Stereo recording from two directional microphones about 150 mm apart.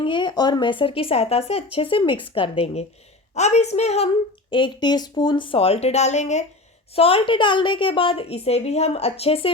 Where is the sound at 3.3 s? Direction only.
50° left (ahead or behind).